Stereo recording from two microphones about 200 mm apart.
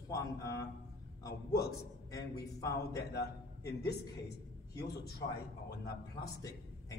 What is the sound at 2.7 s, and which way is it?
A man's voice, 55° left (ahead or behind).